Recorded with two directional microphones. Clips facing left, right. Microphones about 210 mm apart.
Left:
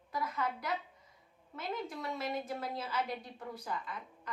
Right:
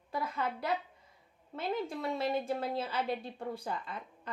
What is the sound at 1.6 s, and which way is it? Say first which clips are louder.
A woman's voice: right 5 dB; 30° right (ahead or behind).